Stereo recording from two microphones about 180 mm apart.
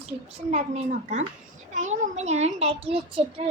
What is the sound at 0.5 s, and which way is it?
A child's voice, 40° right (ahead or behind).